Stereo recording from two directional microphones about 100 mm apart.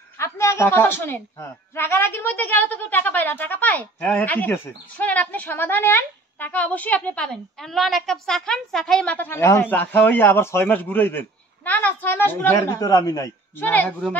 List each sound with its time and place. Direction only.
0.2 s a man's voice: 30° left (ahead or behind)
7.5 s a woman's voice: centre (ahead or behind); by 12.5 s 20° left (ahead or behind)
12.5 s speech: 35° left (ahead or behind)
13.6 s a man's voice: 20° left (ahead or behind)